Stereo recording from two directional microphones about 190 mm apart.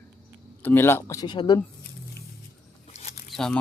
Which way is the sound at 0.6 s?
10° left (ahead or behind).